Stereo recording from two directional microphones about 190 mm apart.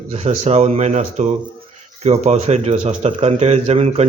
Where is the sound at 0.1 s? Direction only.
30° right (ahead or behind).